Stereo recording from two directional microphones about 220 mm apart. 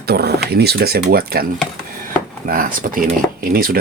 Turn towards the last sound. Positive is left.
turn(degrees=-40)  # may be behind; listen again after turning